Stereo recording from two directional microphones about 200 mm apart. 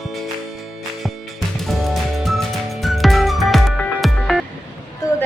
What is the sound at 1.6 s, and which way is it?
Music, centre (ahead or behind).